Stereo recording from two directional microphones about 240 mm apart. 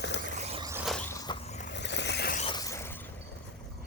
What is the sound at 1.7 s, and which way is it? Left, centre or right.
Vehicle, left.